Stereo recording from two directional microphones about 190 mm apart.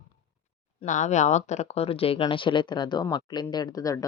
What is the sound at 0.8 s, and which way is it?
Speech, 40° left (ahead or behind).